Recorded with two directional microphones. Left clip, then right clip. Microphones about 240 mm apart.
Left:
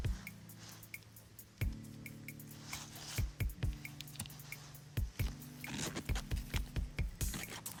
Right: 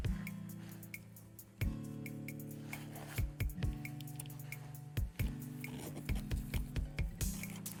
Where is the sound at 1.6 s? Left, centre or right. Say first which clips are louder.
Right 3 dB; centre.